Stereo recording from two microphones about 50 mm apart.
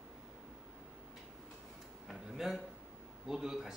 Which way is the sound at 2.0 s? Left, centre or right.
Centre.